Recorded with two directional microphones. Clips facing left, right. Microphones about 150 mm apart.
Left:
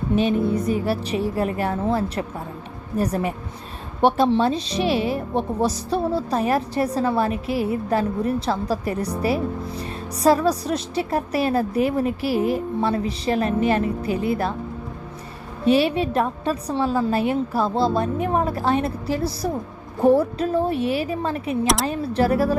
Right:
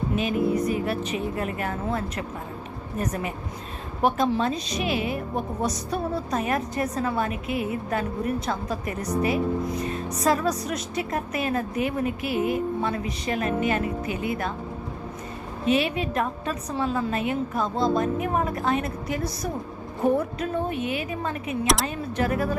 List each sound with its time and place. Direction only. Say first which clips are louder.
0.2 s a woman's voice: left 2 dB; 30° left (ahead or behind)
15.6 s a woman's voice: left 5 dB; 35° left (ahead or behind)